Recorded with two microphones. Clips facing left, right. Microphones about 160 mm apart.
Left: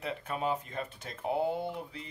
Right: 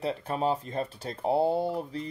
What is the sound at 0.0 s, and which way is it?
Speech, 35° right (ahead or behind).